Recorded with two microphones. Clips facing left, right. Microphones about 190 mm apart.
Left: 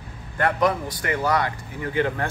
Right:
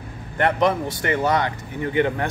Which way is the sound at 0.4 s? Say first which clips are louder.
Right 2 dB; 25° right (ahead or behind).